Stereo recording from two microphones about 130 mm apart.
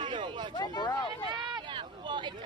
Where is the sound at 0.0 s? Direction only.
40° right (ahead or behind).